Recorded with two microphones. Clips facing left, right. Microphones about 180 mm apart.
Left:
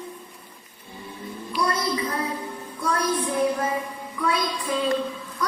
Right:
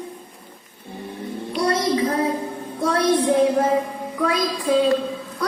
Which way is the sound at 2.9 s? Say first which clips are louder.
Right 7 dB; 90° right.